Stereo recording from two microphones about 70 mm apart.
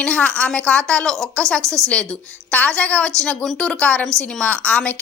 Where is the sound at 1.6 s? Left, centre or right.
Right.